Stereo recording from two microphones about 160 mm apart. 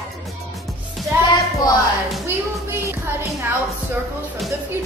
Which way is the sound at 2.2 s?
15° right (ahead or behind).